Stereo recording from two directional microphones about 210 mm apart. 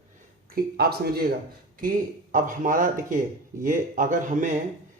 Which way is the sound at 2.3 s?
40° right (ahead or behind).